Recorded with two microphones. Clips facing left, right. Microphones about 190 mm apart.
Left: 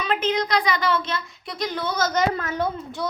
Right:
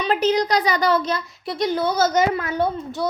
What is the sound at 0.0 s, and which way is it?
A child's voice, 35° right (ahead or behind).